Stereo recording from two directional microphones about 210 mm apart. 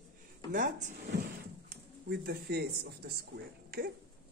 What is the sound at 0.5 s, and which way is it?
Speech, 35° right (ahead or behind).